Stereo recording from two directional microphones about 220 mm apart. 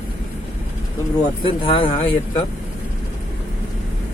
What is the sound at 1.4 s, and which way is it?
Speech, 25° left (ahead or behind).